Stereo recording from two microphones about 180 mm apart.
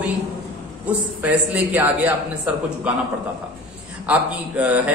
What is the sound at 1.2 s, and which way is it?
Speech, 10° right (ahead or behind).